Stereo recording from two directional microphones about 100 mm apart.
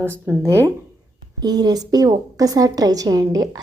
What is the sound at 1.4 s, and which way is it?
A woman's voice, 45° right (ahead or behind).